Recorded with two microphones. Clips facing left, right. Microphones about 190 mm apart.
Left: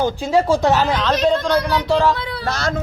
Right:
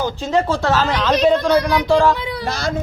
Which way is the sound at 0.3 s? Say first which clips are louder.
Left 2 dB; 15° left (ahead or behind).